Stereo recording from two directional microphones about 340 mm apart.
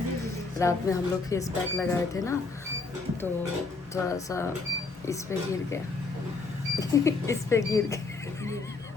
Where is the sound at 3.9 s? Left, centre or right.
Centre.